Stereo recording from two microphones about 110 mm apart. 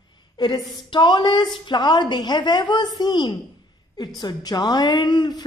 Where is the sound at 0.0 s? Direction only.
40° left (ahead or behind).